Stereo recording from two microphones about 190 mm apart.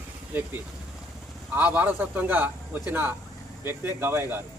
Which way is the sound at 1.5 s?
5° right (ahead or behind).